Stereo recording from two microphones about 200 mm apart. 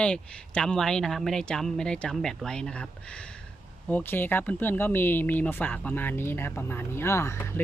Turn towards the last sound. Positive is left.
turn(degrees=15)  # may be behind; listen again after turning